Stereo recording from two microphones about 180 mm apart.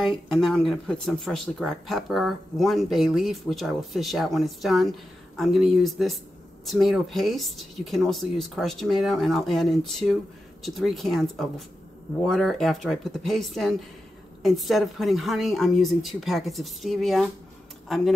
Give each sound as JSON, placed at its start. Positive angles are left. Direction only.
{"t": 0.0, "sound": "speech", "side_deg": 0}